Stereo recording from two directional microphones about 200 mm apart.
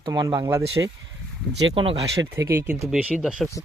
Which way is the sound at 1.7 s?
25° right (ahead or behind).